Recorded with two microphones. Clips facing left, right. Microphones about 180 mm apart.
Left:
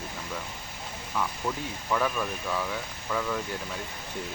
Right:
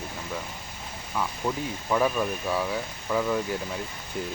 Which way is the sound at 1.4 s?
15° right (ahead or behind).